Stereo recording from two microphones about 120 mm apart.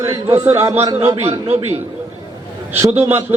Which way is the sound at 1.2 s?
65° right (ahead or behind).